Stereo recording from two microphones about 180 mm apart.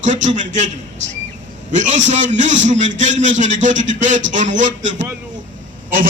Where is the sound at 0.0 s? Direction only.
45° right (ahead or behind).